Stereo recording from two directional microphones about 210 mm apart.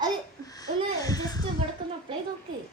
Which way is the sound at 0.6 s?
15° left (ahead or behind).